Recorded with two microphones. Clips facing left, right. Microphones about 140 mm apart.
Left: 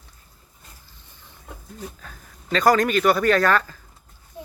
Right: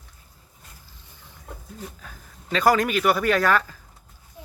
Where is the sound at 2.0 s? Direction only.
10° right (ahead or behind).